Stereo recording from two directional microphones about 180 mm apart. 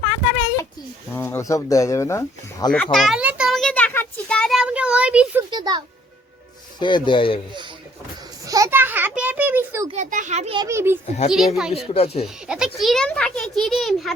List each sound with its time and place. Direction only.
1.1 s speech: 15° left (ahead or behind)
2.7 s a sound: centre (ahead or behind)
5.5 s a child's voice: 25° right (ahead or behind)
6.7 s speech: 25° left (ahead or behind)
8.4 s a sound: 20° right (ahead or behind)
9.9 s a child's voice: 45° right (ahead or behind)
10.5 s a child's voice: 20° right (ahead or behind)
11.3 s a child's voice: centre (ahead or behind)
11.9 s speech: 35° left (ahead or behind)
12.2 s a child's voice: 5° right (ahead or behind)